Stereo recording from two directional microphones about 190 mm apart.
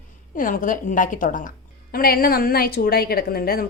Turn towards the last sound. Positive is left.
turn(degrees=50)  # may be behind; listen again after turning